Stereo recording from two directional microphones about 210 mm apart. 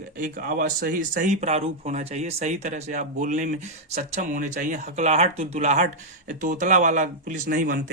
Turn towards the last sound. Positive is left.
turn(degrees=-40)  # may be behind; listen again after turning